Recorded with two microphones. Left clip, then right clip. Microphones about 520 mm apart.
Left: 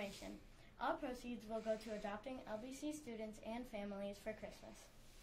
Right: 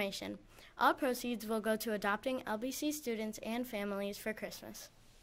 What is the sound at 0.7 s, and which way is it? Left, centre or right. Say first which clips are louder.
A woman's voice: right 12 dB; right.